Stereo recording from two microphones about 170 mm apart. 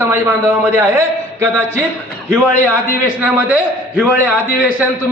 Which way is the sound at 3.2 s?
10° right (ahead or behind).